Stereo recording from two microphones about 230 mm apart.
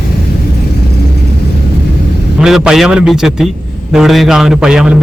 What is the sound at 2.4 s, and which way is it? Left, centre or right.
A man's voice, centre.